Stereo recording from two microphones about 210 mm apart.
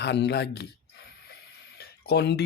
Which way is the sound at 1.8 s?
50° left (ahead or behind).